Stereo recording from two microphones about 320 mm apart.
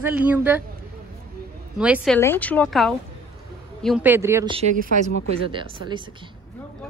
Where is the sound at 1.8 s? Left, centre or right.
Centre.